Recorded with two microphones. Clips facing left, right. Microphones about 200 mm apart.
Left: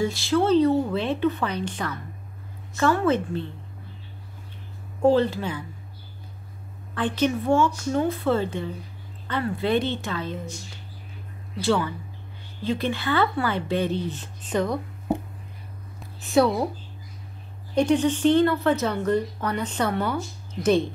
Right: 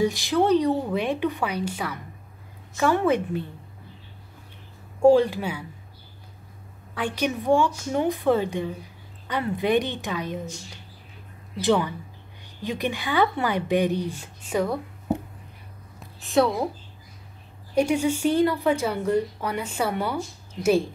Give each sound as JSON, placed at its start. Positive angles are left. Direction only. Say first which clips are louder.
{"t": 0.0, "sound": "speech", "louder": "right 1 dB", "side_deg": -15}
{"t": 5.0, "sound": "speech", "louder": "right 3 dB", "side_deg": -10}
{"t": 7.0, "sound": "speech", "louder": "left 3 dB", "side_deg": -10}
{"t": 11.6, "sound": "speech", "louder": "right 1 dB", "side_deg": -20}
{"t": 16.0, "sound": "a woman's voice", "louder": "left 1 dB", "side_deg": 0}
{"t": 17.7, "sound": "speech", "louder": "left 1 dB", "side_deg": -10}